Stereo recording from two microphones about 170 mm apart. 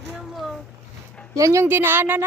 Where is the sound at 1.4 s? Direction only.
20° right (ahead or behind).